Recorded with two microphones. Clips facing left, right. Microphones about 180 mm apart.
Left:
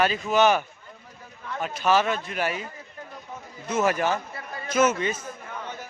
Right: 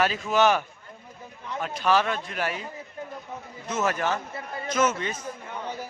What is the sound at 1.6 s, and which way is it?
Speech, 5° left (ahead or behind).